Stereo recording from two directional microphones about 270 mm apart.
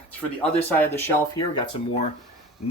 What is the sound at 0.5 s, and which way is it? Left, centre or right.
Speech, centre.